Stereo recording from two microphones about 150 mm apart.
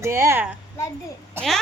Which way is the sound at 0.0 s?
20° right (ahead or behind).